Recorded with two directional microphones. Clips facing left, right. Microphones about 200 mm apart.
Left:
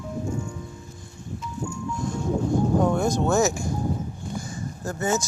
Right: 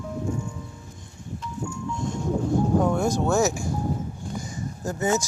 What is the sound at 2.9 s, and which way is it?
Speech, 10° right (ahead or behind).